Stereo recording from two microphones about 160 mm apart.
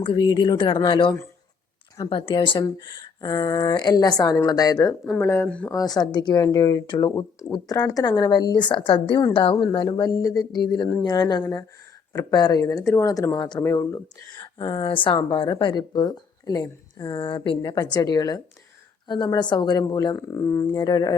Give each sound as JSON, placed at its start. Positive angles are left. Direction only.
{"t": 0.0, "sound": "speech", "side_deg": 30}
{"t": 5.0, "sound": "speech", "side_deg": 5}
{"t": 5.7, "sound": "speech", "side_deg": 25}
{"t": 14.3, "sound": "speech", "side_deg": 30}